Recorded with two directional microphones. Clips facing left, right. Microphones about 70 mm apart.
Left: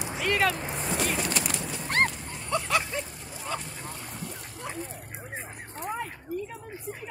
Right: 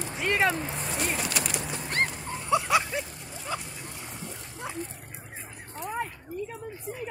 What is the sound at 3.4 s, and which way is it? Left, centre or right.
Dog, centre.